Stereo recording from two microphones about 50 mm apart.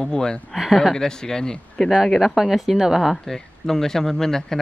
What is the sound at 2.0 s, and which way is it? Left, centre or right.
Speech, centre.